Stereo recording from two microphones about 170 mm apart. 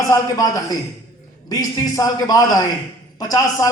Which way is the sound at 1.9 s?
20° left (ahead or behind).